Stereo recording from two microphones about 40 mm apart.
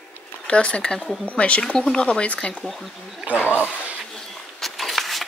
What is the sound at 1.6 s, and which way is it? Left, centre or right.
Speech, left.